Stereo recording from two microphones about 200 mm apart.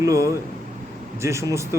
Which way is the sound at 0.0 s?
15° right (ahead or behind).